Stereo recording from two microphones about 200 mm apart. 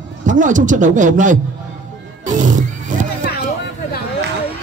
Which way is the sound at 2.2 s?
40° right (ahead or behind).